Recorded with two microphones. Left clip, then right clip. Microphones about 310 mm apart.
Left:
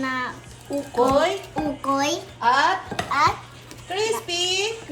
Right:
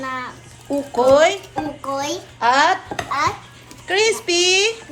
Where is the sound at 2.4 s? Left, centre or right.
Right.